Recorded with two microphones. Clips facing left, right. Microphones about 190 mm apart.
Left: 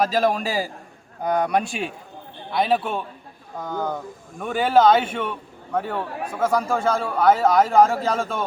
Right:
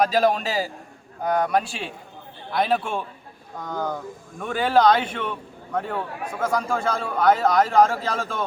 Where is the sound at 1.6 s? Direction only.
35° right (ahead or behind).